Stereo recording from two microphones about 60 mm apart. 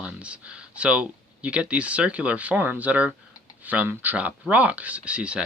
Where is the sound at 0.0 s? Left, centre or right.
Centre.